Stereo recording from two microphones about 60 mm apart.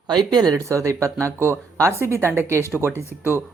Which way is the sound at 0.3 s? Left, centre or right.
Right.